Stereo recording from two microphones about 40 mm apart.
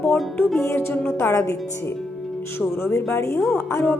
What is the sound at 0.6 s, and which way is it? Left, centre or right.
Speech, left.